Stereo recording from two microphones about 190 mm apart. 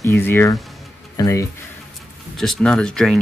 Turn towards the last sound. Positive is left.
turn(degrees=5)  # may be behind; listen again after turning